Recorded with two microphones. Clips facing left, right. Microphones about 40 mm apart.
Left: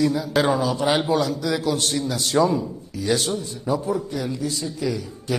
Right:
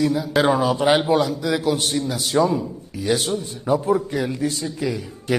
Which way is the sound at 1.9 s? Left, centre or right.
Centre.